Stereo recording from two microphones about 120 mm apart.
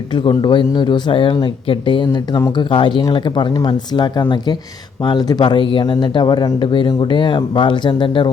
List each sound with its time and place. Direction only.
0.1 s speech: 40° left (ahead or behind)